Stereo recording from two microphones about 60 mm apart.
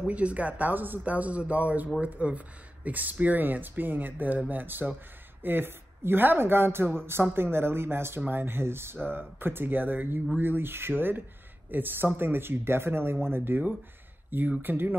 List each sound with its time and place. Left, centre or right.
0.0 s a woman's voice: right
14.6 s speech: right